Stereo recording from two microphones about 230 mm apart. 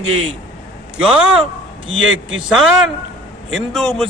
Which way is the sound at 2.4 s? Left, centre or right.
Centre.